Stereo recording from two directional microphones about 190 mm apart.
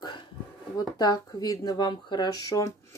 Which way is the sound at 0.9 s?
20° left (ahead or behind).